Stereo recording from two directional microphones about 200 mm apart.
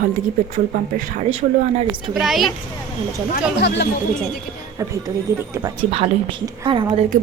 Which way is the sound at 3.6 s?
55° left (ahead or behind).